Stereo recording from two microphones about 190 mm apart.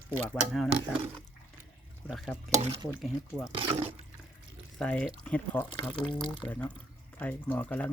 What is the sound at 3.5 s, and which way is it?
Speech, 30° right (ahead or behind).